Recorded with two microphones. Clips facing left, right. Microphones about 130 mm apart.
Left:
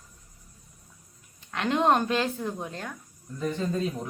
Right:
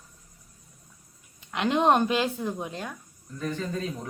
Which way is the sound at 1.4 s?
20° right (ahead or behind).